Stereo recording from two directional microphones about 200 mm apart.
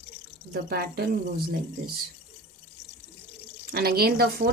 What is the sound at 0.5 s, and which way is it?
Speech, 50° right (ahead or behind).